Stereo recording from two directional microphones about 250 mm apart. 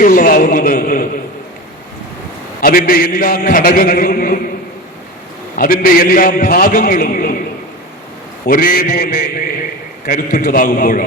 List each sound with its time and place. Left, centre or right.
0.0 s speech: left
2.6 s a man's voice: left
5.5 s a man's voice: left
8.4 s a man's voice: left